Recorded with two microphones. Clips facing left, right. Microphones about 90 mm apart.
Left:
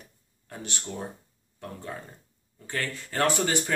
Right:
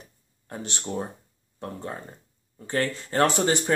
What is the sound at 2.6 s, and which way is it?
Speech, 30° right (ahead or behind).